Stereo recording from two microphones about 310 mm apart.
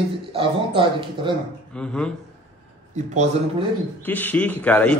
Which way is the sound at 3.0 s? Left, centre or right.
Right.